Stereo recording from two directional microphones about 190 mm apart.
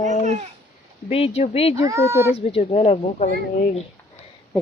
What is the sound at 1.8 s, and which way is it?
Speech, 15° right (ahead or behind).